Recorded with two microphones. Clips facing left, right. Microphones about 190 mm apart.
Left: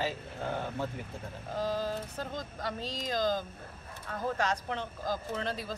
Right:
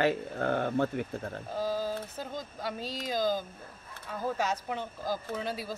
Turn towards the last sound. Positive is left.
turn(degrees=-5)  # may be behind; listen again after turning